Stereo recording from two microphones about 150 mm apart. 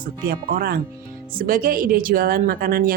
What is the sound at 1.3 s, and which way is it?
A woman's voice, 70° right (ahead or behind).